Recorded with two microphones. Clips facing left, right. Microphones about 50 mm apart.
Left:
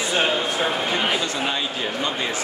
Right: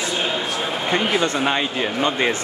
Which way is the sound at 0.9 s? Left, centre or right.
Right.